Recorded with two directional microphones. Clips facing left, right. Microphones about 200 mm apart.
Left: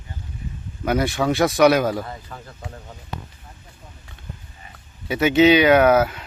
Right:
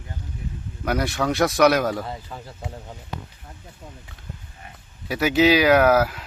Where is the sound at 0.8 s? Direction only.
Centre (ahead or behind).